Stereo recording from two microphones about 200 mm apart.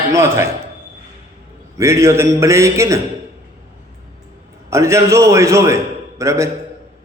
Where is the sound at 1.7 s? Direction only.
15° right (ahead or behind).